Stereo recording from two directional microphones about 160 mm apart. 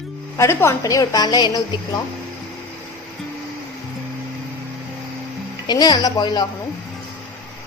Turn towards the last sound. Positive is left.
turn(degrees=25)  # may be behind; listen again after turning